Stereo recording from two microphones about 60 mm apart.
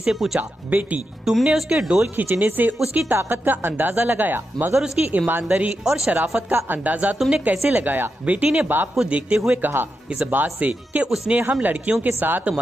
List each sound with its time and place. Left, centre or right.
0.0 s speech: centre
0.4 s speech: right
1.2 s speech: centre
2.1 s speech: right
5.5 s speech: centre
6.5 s speech: right
9.6 s speech: right
10.0 s speech: centre
10.3 s speech: right